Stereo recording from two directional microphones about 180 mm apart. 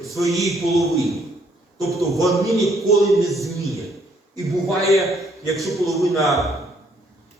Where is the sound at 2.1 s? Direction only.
Centre (ahead or behind).